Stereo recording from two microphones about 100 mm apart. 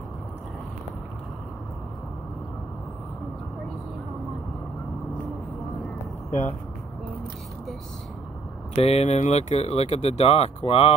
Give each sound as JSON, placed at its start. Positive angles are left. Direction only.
{"t": 8.7, "sound": "speech", "side_deg": 90}